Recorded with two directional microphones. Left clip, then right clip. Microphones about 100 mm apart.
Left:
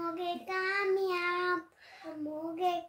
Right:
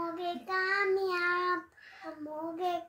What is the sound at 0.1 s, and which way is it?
Child singing, 40° left (ahead or behind).